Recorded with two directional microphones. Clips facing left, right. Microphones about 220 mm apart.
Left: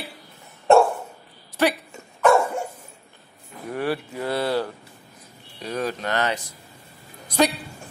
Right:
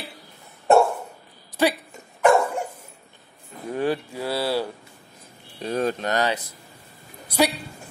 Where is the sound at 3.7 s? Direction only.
20° right (ahead or behind).